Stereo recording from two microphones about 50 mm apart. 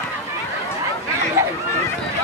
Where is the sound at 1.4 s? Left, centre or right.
Right.